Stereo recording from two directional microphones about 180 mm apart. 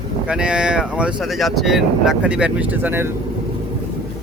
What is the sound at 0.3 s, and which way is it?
Speech, 5° right (ahead or behind).